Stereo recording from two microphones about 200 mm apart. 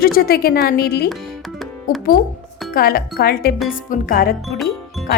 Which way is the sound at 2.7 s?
45° left (ahead or behind).